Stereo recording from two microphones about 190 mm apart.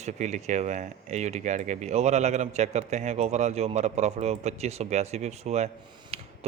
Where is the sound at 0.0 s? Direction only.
40° right (ahead or behind).